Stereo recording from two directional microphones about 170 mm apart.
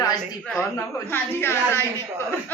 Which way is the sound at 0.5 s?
10° left (ahead or behind).